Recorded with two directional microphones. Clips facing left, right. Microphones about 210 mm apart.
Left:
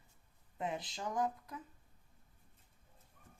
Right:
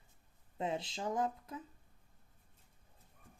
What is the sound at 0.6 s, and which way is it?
Speech, 25° right (ahead or behind).